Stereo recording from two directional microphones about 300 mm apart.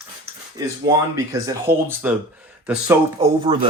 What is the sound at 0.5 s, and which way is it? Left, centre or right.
Speech, centre.